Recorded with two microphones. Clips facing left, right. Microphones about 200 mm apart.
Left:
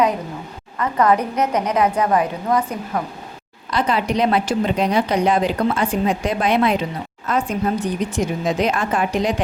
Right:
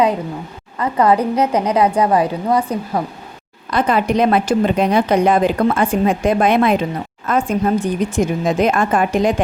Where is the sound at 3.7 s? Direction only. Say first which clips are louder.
Right 4 dB; 55° right (ahead or behind).